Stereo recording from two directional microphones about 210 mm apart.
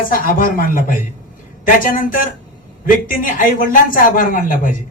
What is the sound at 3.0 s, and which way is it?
Speech, 40° left (ahead or behind).